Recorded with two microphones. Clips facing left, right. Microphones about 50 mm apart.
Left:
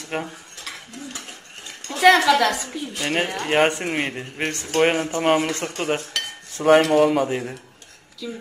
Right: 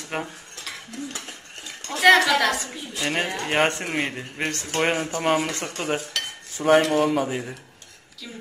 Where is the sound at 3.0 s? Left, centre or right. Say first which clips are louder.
Left 1 dB; centre.